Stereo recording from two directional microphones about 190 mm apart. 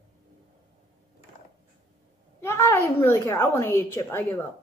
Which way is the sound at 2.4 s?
15° left (ahead or behind).